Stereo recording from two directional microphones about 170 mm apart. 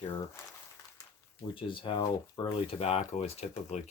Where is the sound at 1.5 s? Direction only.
30° left (ahead or behind).